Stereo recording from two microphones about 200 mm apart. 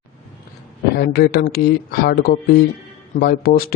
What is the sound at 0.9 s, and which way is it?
Speech, 50° left (ahead or behind).